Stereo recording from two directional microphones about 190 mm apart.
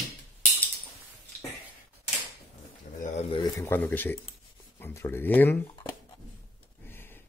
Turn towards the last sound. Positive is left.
turn(degrees=10)  # may be behind; listen again after turning